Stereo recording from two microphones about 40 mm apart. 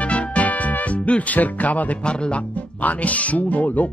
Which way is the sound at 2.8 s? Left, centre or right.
Left.